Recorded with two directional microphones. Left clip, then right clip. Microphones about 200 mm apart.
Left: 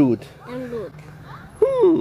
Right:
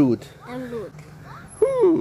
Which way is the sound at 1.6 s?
5° left (ahead or behind).